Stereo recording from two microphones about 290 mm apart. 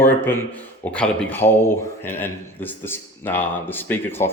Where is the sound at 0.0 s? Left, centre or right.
Centre.